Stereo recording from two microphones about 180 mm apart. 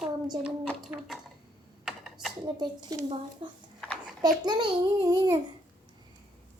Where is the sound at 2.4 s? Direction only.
25° right (ahead or behind).